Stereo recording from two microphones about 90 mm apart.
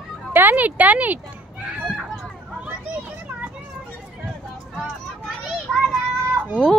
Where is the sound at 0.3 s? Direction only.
20° right (ahead or behind).